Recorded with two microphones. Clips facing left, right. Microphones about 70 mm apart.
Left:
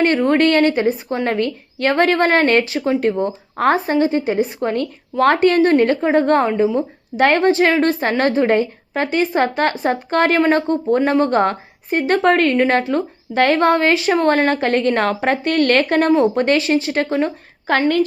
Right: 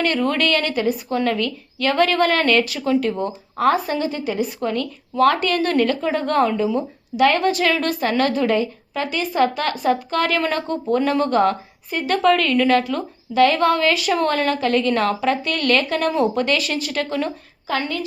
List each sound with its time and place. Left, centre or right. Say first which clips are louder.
0.0 s a woman's voice: left 5 dB; left
17.7 s a woman's voice: left 8 dB; left